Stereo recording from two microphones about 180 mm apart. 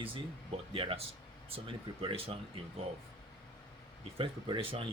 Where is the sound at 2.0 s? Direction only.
30° right (ahead or behind).